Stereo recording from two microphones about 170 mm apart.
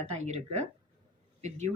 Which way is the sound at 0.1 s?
40° right (ahead or behind).